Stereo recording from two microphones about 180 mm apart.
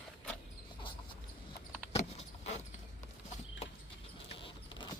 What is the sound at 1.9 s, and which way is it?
Vehicle, 35° left (ahead or behind).